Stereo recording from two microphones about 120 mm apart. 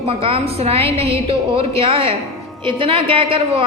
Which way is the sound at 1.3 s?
50° right (ahead or behind).